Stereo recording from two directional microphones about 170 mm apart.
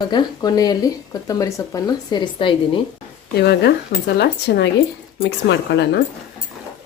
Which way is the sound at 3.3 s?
75° left (ahead or behind).